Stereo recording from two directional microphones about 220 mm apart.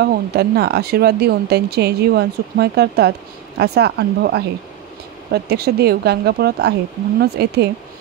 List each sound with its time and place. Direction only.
0.0 s a woman's voice: 45° right (ahead or behind)